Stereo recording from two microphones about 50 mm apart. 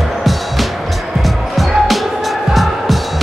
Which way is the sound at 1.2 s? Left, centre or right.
Centre.